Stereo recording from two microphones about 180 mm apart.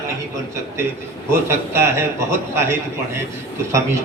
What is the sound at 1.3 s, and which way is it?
A man's voice, 15° right (ahead or behind).